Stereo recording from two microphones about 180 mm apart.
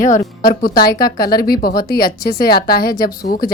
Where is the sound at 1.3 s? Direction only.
55° left (ahead or behind).